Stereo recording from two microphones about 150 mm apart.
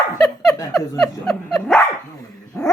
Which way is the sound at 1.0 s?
Centre (ahead or behind).